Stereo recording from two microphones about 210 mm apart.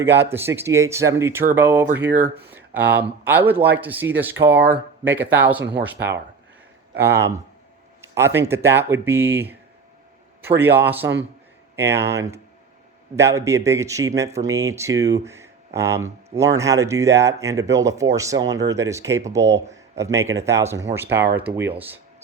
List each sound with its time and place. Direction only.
0.0 s speech: 10° right (ahead or behind)
6.0 s speech: 55° right (ahead or behind)
7.0 s speech: 15° right (ahead or behind)